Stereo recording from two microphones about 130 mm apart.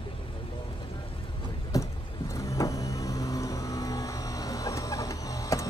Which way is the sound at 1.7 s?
25° left (ahead or behind).